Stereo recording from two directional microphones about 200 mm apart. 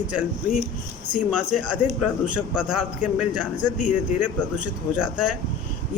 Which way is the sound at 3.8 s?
40° left (ahead or behind).